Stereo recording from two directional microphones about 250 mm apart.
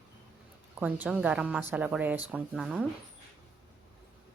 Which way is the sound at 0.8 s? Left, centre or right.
Centre.